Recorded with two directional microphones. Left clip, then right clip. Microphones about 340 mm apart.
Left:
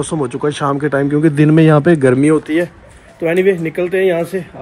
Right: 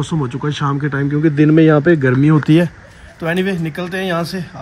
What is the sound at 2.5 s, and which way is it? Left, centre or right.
Speech, right.